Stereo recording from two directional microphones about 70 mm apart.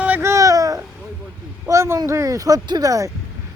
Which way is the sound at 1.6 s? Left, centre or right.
Right.